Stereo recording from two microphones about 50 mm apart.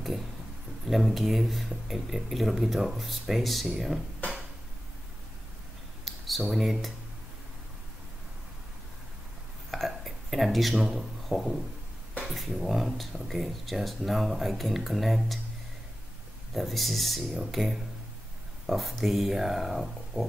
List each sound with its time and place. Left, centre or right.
0.8 s speech: centre
6.0 s a sound: centre
6.5 s speech: centre
9.7 s a sound: centre
11.2 s speech: centre
16.5 s speech: centre